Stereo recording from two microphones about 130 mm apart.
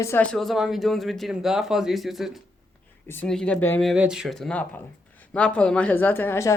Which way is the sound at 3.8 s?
5° right (ahead or behind).